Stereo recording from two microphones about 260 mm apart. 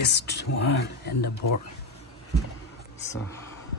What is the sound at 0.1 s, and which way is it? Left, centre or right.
Speech, left.